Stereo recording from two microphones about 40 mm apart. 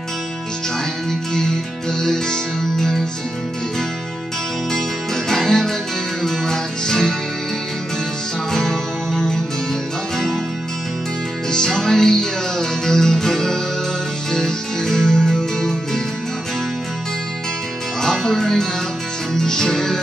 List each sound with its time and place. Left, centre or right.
1.3 s music: centre
4.7 s music: centre
8.5 s music: centre
11.5 s music: centre
18.0 s music: centre